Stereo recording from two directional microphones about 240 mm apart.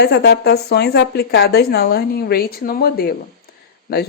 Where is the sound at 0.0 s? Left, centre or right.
Left.